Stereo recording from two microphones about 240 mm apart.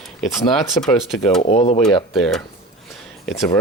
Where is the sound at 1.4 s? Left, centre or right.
Left.